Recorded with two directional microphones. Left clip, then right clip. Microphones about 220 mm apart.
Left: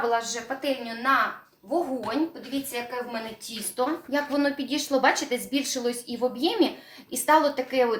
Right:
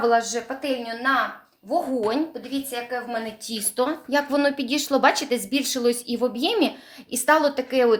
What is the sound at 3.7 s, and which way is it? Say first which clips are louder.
A woman's voice: right 4 dB; 50° right (ahead or behind).